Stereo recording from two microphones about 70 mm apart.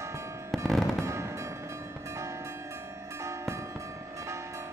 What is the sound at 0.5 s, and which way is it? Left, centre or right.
Fireworks, centre.